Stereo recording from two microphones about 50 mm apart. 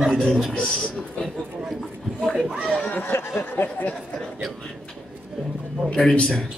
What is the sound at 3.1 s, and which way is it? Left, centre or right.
Speech, left.